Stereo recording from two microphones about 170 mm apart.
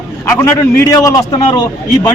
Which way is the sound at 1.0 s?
20° left (ahead or behind).